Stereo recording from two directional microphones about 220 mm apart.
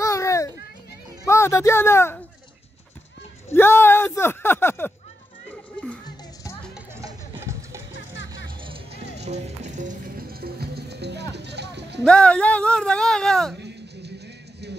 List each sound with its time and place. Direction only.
0.0 s children playing: 15° left (ahead or behind)
1.2 s speech: 10° left (ahead or behind)
3.4 s speech: 10° left (ahead or behind)
5.5 s music: 5° left (ahead or behind)
7.0 s a sound: 15° right (ahead or behind)
8.6 s music: 25° right (ahead or behind); by 12.0 s 50° right (ahead or behind)
12.0 s speech: 5° left (ahead or behind)
13.6 s a sound: 50° right (ahead or behind)